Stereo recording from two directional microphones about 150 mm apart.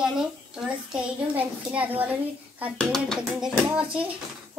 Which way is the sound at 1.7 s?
10° right (ahead or behind).